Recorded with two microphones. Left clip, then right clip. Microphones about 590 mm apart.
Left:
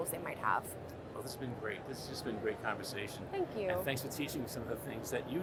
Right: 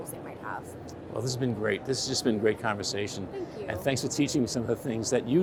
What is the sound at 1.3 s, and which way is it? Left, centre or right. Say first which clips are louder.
Speech: right 13 dB; right.